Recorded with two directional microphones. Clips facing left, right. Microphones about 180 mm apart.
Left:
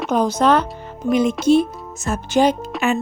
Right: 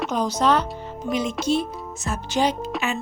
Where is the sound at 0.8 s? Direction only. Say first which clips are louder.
Left 7 dB; 55° left (ahead or behind).